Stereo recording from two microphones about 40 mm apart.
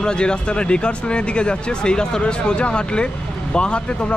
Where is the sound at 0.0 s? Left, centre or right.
Left.